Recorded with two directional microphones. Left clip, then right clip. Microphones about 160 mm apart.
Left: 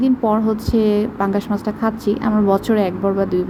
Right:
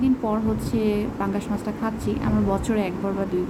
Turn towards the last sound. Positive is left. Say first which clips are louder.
# left 8 dB
turn(degrees=30)  # may be behind; listen again after turning